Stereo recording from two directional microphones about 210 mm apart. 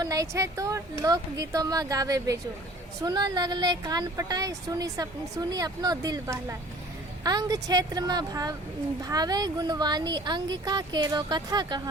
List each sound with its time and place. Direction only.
0.0 s speech: 15° right (ahead or behind)